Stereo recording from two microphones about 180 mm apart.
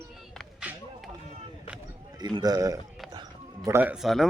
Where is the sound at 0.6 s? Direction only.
5° right (ahead or behind).